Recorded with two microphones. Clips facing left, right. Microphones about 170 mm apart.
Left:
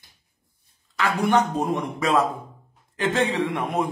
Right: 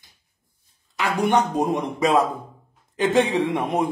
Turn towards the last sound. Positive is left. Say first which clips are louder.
# right 3 dB
turn(degrees=-20)  # may be behind; listen again after turning